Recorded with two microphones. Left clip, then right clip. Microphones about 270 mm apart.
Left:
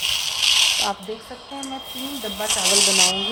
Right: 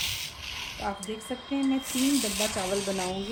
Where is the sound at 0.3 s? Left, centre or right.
Left.